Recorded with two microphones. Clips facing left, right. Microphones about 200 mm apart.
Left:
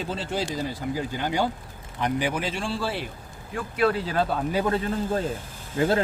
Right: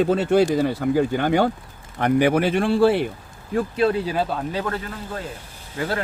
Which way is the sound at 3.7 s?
25° right (ahead or behind).